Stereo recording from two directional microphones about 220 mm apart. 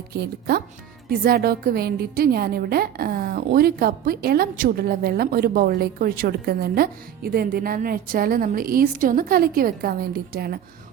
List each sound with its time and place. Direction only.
0.1 s a woman's voice: 45° right (ahead or behind)